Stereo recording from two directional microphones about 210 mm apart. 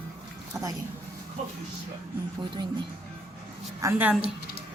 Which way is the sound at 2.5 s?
25° right (ahead or behind).